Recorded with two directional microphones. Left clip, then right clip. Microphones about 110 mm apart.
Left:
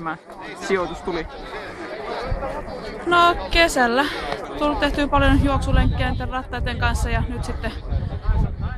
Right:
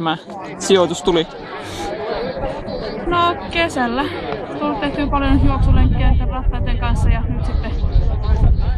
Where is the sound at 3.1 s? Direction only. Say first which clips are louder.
Left 1 dB; 35° left (ahead or behind).